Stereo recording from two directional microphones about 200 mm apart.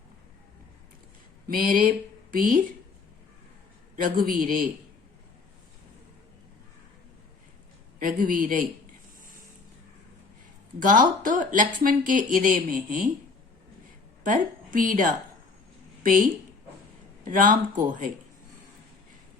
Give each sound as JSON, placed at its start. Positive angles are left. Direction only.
{"t": 1.5, "sound": "speech", "side_deg": -45}
{"t": 4.0, "sound": "speech", "side_deg": -45}
{"t": 7.9, "sound": "speech", "side_deg": -45}
{"t": 10.8, "sound": "speech", "side_deg": -40}
{"t": 14.3, "sound": "a woman's voice", "side_deg": -40}